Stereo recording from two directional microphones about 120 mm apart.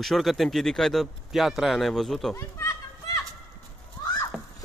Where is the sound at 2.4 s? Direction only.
30° left (ahead or behind).